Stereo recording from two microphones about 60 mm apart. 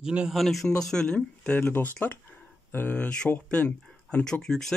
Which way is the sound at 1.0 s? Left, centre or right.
Left.